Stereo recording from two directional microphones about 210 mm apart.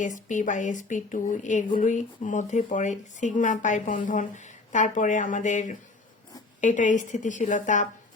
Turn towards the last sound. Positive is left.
turn(degrees=35)  # may be behind; listen again after turning